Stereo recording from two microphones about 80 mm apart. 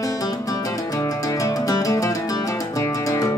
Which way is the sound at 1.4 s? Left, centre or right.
Left.